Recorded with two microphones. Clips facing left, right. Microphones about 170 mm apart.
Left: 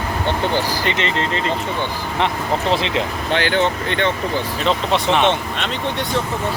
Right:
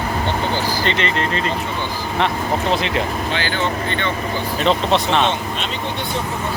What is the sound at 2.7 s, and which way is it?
Speech, 25° left (ahead or behind).